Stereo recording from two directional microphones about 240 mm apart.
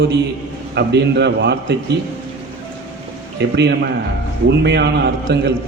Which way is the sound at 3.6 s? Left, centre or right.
Right.